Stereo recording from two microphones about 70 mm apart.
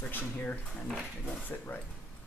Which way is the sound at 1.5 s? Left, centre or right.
Left.